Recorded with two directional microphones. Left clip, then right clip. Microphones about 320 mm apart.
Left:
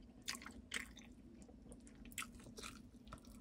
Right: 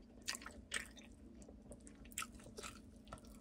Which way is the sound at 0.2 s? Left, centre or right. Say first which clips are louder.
Right 2 dB; centre.